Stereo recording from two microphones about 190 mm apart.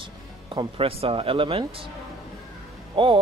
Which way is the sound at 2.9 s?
25° right (ahead or behind).